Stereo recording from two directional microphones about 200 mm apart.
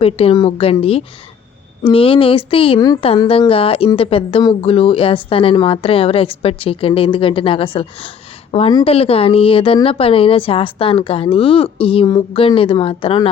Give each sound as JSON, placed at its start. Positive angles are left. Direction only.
{"t": 0.0, "sound": "speech", "side_deg": 30}